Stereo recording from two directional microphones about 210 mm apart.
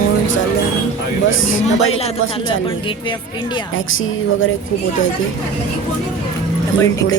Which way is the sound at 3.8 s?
70° left (ahead or behind).